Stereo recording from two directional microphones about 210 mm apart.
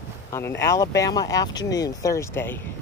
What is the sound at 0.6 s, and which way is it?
Speech, 15° left (ahead or behind).